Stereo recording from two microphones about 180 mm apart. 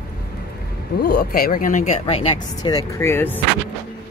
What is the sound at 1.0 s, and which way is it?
Speech, 60° left (ahead or behind).